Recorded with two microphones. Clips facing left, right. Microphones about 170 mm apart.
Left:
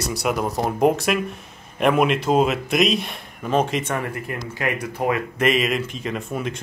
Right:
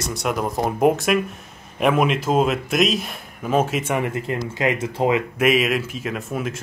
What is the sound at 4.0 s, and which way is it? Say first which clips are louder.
Speech: right 4 dB; 20° right (ahead or behind).